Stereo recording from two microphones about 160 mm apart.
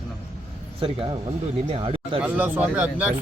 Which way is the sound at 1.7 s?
35° right (ahead or behind).